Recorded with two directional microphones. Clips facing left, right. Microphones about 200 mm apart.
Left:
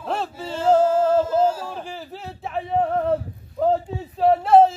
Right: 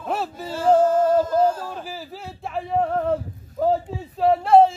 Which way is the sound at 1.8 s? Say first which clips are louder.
Left 1 dB; 5° right (ahead or behind).